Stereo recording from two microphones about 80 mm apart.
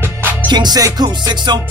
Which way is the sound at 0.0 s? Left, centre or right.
Right.